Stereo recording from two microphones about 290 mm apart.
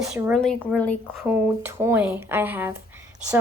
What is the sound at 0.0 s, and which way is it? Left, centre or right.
A woman's voice, centre.